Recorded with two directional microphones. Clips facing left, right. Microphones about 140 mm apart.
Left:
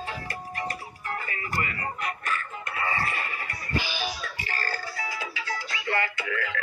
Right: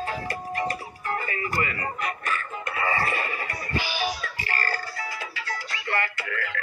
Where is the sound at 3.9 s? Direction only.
15° right (ahead or behind).